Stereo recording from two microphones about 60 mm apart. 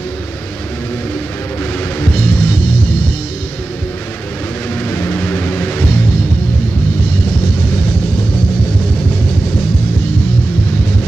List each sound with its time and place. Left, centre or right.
2.0 s music: left
4.8 s vehicle: left
5.2 s music: left